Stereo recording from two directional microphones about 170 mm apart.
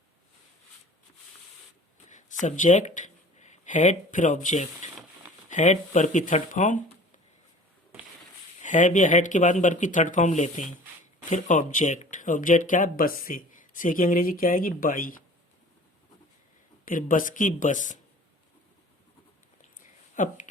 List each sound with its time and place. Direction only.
2.0 s speech: 45° left (ahead or behind)
8.6 s speech: 50° left (ahead or behind)
16.8 s speech: 50° left (ahead or behind)
20.1 s speech: 45° left (ahead or behind)